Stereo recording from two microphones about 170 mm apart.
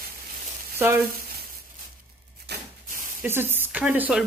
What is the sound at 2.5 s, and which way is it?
Rub, 75° right (ahead or behind).